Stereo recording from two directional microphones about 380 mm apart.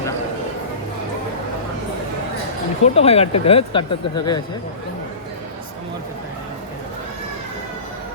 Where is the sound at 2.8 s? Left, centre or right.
Centre.